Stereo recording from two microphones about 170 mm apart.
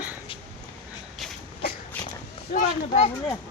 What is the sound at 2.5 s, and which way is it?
Speech, 40° left (ahead or behind).